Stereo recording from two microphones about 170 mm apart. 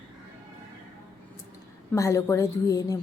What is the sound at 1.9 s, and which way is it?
A woman's voice, 20° left (ahead or behind).